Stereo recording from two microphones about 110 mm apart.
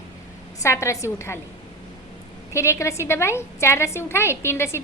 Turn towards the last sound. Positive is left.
turn(degrees=25)  # may be behind; listen again after turning